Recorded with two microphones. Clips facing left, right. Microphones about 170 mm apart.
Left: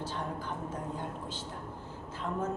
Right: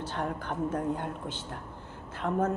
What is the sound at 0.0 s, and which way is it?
A woman's voice, 65° right (ahead or behind).